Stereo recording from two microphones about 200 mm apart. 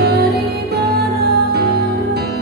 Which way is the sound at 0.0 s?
55° right (ahead or behind).